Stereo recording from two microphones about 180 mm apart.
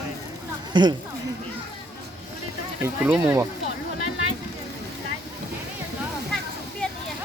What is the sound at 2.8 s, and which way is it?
Speech, 5° right (ahead or behind).